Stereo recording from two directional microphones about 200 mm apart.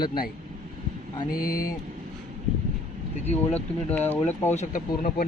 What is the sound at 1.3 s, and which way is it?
Speech, 45° left (ahead or behind).